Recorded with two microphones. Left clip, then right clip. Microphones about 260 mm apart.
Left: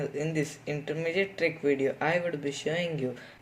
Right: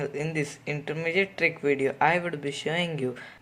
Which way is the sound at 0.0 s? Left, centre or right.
Centre.